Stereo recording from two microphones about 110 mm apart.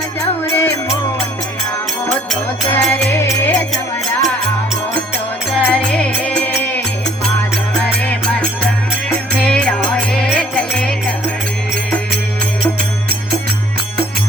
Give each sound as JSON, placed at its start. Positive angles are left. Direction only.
{"t": 0.4, "sound": "music", "side_deg": 20}
{"t": 2.0, "sound": "music", "side_deg": 5}
{"t": 2.9, "sound": "music", "side_deg": 20}
{"t": 5.5, "sound": "music", "side_deg": 10}
{"t": 8.0, "sound": "music", "side_deg": 10}